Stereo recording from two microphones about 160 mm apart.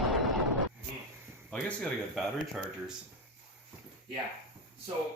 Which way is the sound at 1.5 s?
Centre (ahead or behind).